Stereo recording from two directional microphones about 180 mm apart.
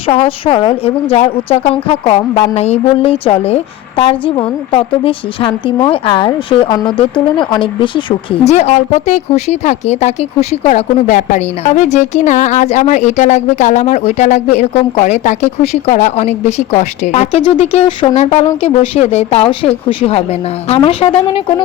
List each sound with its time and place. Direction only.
0.1 s a woman's voice: 35° left (ahead or behind)